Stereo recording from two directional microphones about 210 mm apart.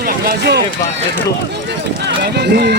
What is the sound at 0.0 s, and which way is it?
Run, 50° right (ahead or behind).